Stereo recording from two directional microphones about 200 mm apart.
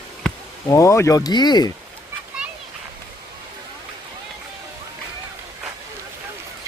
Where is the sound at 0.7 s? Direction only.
15° left (ahead or behind).